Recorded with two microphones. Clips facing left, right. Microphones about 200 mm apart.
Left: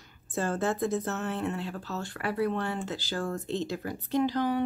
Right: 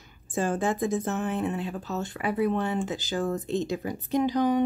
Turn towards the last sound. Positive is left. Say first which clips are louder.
# right 3 dB
turn(degrees=-15)  # may be behind; listen again after turning